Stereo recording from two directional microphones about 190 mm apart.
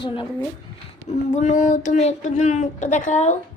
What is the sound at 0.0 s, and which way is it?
Speech, 25° left (ahead or behind).